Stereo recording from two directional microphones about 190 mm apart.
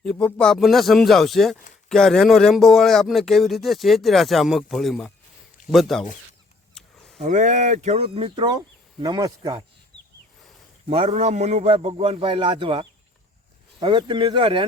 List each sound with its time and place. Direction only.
0.0 s speech: 5° left (ahead or behind)
7.2 s speech: 40° right (ahead or behind); by 9.6 s 20° right (ahead or behind)
10.8 s speech: 35° right (ahead or behind)